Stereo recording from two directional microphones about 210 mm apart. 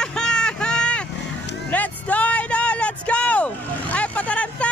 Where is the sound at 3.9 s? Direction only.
5° left (ahead or behind).